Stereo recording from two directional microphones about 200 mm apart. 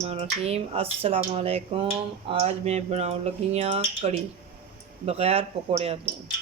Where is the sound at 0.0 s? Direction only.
30° right (ahead or behind).